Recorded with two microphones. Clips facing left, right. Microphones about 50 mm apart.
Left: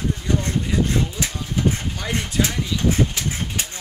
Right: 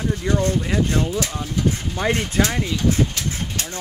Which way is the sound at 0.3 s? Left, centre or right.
Right.